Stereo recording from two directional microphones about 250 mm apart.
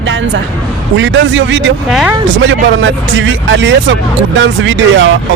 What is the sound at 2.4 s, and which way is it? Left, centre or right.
Speech, right.